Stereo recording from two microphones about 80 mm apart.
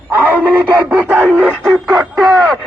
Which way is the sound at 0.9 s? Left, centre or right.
Centre.